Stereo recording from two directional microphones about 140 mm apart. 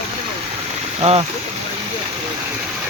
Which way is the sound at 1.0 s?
45° right (ahead or behind).